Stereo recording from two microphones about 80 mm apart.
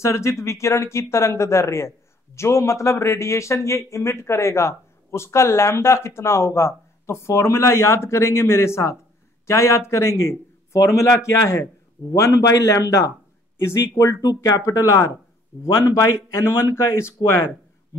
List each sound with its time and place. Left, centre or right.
0.0 s speech: left
14.2 s speech: left
16.2 s speech: left